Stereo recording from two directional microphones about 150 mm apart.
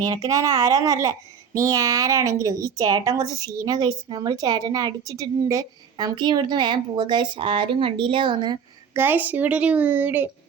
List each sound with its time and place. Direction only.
0.0 s a woman's voice: 25° right (ahead or behind)
8.9 s a woman's voice: 15° right (ahead or behind)